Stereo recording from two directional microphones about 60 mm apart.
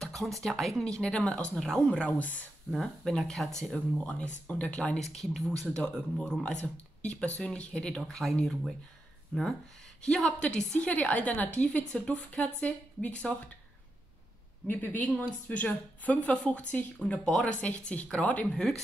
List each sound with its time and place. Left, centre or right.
0.0 s speech: centre
1.9 s a woman's voice: left
2.7 s speech: centre; by 4.9 s left
4.9 s speech: centre
10.0 s a woman's voice: centre
14.7 s a woman's voice: left; by 17.6 s centre
17.6 s a woman's voice: left
18.5 s speech: centre